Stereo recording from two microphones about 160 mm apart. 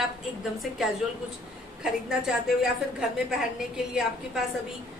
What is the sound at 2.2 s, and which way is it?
Speech, 5° right (ahead or behind).